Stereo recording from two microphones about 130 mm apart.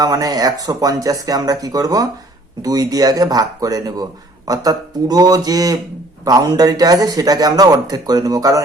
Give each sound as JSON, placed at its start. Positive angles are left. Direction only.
{"t": 0.0, "sound": "a man's voice", "side_deg": -30}